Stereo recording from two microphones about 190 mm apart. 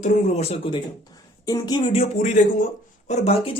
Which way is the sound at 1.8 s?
35° left (ahead or behind).